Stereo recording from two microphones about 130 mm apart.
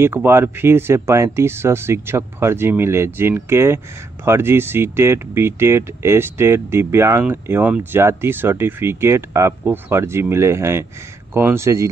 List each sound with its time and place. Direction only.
0.0 s speech: 20° right (ahead or behind)